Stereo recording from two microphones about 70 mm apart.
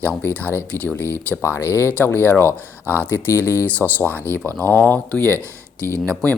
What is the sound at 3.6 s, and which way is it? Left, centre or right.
Speech, left.